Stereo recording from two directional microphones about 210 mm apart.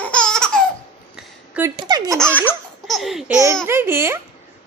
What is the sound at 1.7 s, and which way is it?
Speech, 20° right (ahead or behind).